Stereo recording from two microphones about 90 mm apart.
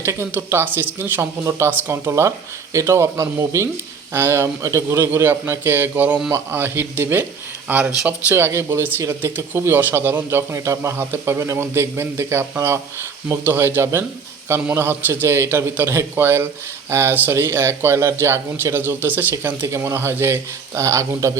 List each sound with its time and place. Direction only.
0.0 s a man's voice: 30° right (ahead or behind)
8.4 s a man's voice: 30° right (ahead or behind)